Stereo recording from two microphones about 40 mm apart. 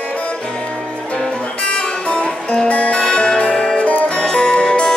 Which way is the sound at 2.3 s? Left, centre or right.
Centre.